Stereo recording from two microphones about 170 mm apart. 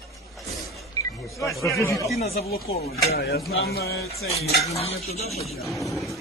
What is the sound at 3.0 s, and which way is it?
Speech, 70° left (ahead or behind).